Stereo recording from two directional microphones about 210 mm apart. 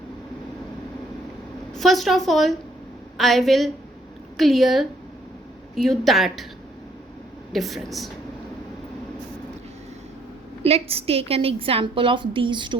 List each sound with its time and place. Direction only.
1.7 s a woman's voice: centre (ahead or behind)
7.5 s a woman's voice: centre (ahead or behind)
10.6 s a woman's voice: 30° right (ahead or behind)